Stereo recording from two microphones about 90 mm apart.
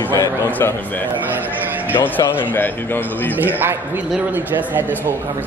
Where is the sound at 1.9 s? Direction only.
20° left (ahead or behind).